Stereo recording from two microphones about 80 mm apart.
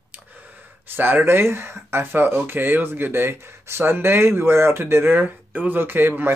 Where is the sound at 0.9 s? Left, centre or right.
Right.